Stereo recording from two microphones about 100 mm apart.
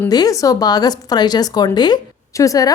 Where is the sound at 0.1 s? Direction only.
40° left (ahead or behind).